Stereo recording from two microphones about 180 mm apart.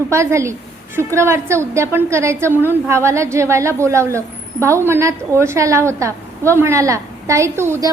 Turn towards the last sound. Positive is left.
turn(degrees=-15)  # may be behind; listen again after turning